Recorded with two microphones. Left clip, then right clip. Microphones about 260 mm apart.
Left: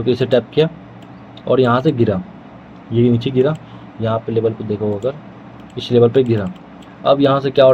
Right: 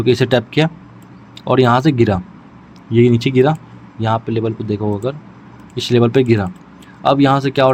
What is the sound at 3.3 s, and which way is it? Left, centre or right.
Speech, right.